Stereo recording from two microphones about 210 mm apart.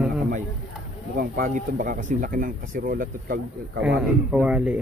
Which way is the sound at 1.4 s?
40° right (ahead or behind).